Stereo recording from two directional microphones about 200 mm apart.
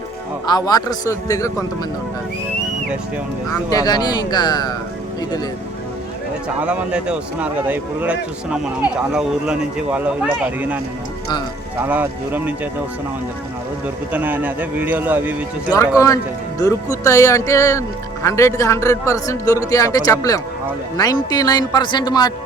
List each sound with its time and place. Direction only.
0.4 s a man's voice: 20° left (ahead or behind)
3.5 s a man's voice: 20° left (ahead or behind)
6.6 s speech: 5° right (ahead or behind)
11.8 s speech: 10° right (ahead or behind)
13.8 s speech: 10° right (ahead or behind)
16.0 s a man's voice: 15° left (ahead or behind)